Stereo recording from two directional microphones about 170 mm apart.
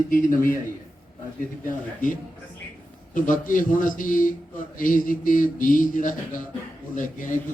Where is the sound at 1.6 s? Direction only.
50° left (ahead or behind).